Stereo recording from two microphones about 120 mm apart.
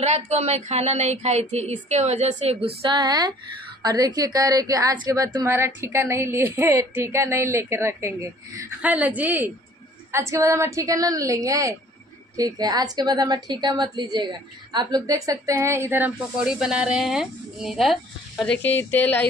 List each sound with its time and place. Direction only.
0.0 s speech: 65° right (ahead or behind)
2.5 s a woman's voice: 45° right (ahead or behind); by 8.6 s 20° right (ahead or behind)
8.8 s a woman's voice: 10° right (ahead or behind)
10.1 s a woman's voice: 25° right (ahead or behind)
16.3 s a woman's voice: 5° right (ahead or behind)
18.6 s speech: 15° left (ahead or behind)